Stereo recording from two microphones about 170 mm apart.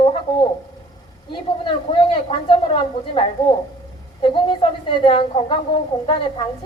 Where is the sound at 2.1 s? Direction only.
30° left (ahead or behind).